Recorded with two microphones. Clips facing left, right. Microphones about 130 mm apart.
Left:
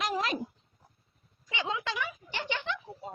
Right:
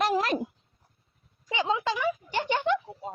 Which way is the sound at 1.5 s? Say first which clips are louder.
Right 7 dB; 30° right (ahead or behind).